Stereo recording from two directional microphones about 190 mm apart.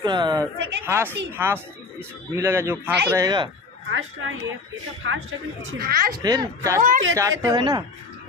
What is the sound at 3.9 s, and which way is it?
Speech, 90° right.